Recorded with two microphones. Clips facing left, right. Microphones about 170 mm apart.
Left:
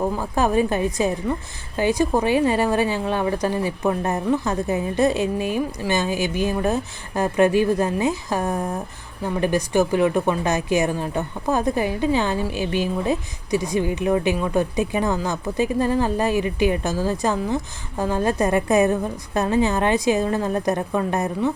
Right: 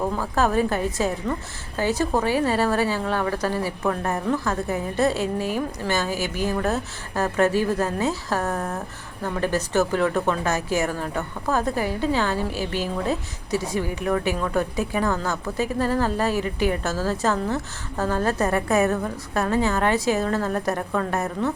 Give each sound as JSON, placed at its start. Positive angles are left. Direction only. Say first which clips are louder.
{"t": 0.0, "sound": "speech", "louder": "left 1 dB", "side_deg": 15}